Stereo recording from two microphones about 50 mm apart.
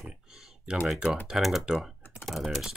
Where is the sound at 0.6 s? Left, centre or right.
Centre.